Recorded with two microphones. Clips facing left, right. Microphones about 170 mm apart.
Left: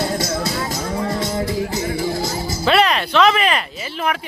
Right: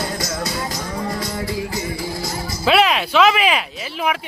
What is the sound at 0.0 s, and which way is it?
Music, 25° left (ahead or behind).